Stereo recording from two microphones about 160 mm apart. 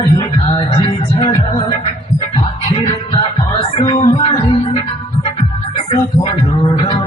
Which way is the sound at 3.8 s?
30° left (ahead or behind).